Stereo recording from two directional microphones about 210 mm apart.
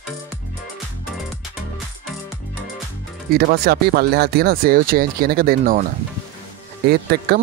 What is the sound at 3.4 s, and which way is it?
Speech, 45° right (ahead or behind).